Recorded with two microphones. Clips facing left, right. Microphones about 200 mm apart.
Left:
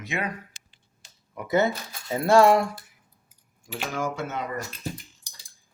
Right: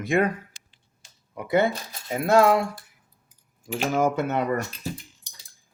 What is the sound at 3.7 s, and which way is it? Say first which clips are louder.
Speech: right 7 dB; 45° right (ahead or behind).